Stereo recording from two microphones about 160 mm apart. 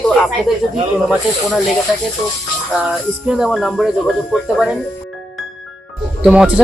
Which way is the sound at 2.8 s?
5° right (ahead or behind).